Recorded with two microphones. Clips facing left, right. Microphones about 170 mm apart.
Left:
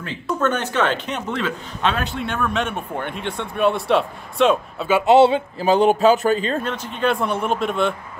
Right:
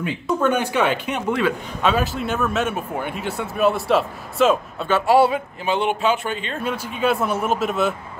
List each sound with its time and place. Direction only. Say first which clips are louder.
0.0 s speech: right 2 dB; 10° right (ahead or behind)
5.0 s speech: left 3 dB; 25° left (ahead or behind)
5.7 s speech: left 6 dB; 40° left (ahead or behind)
6.6 s speech: even; 10° right (ahead or behind)